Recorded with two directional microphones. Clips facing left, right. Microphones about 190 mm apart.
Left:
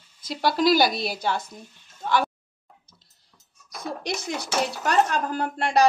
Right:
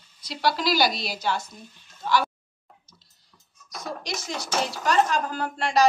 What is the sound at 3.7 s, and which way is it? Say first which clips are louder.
Speech: left 3 dB; 60° left (ahead or behind).